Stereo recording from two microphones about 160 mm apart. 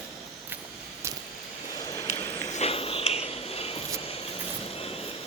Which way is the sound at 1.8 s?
20° left (ahead or behind).